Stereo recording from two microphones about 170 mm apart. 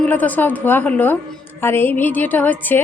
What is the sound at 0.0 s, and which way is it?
A woman's voice, 10° left (ahead or behind).